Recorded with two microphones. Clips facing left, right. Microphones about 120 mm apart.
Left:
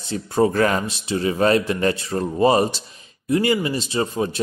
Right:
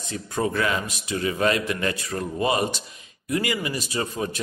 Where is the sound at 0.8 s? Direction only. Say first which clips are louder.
Left 4 dB; 30° left (ahead or behind).